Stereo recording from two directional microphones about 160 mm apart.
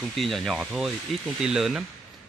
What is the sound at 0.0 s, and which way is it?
Speech, centre (ahead or behind).